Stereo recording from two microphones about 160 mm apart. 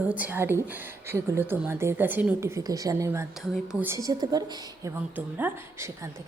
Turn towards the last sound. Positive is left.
turn(degrees=-10)  # may be behind; listen again after turning